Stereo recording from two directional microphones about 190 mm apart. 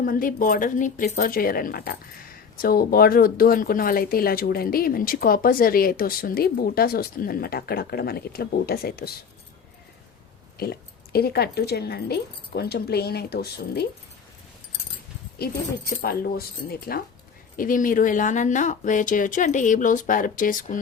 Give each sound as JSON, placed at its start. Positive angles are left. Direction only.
{"t": 0.0, "sound": "speech", "side_deg": 50}
{"t": 10.6, "sound": "speech", "side_deg": 55}
{"t": 15.4, "sound": "speech", "side_deg": 50}